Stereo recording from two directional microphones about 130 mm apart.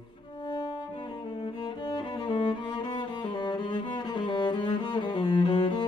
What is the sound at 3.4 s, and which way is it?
Cello, 35° left (ahead or behind).